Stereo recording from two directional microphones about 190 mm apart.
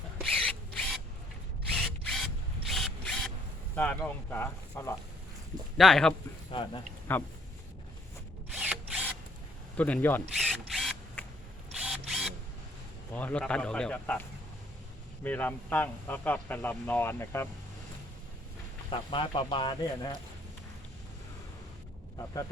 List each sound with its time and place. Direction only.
0.2 s rub: 5° left (ahead or behind)
1.7 s drill: 5° left (ahead or behind)
2.6 s mechanisms: centre (ahead or behind)
3.8 s speech: 10° left (ahead or behind)
5.7 s speech: centre (ahead or behind)
8.5 s drill: 5° right (ahead or behind)
9.7 s speech: 10° left (ahead or behind)
10.3 s drill: centre (ahead or behind)
11.7 s camera: 5° right (ahead or behind)
13.1 s speech: 10° left (ahead or behind)
18.9 s speech: 25° left (ahead or behind)